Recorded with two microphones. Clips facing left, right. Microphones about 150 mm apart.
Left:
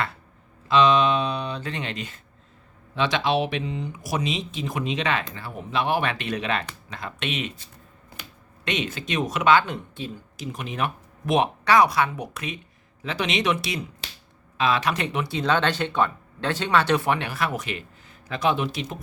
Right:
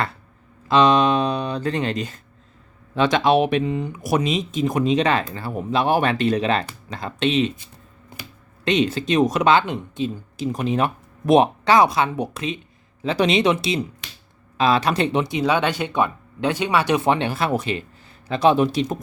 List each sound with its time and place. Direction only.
0.7 s speech: 40° right (ahead or behind)
8.6 s speech: 35° right (ahead or behind)
9.6 s speech: 20° right (ahead or behind)
10.3 s speech: 35° right (ahead or behind)
14.0 s finger snapping: 30° left (ahead or behind)
14.6 s speech: 35° right (ahead or behind)